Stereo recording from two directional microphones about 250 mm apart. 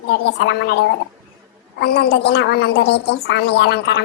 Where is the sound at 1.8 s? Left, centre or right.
Left.